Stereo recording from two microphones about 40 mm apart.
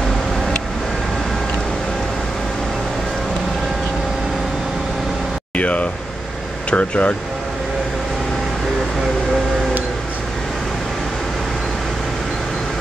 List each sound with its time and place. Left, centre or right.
5.6 s air conditioning: left
6.7 s speech: left